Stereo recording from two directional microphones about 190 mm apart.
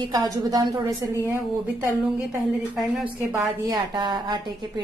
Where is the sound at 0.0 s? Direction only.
20° right (ahead or behind).